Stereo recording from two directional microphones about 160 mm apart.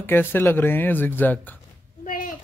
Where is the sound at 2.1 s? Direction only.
60° left (ahead or behind).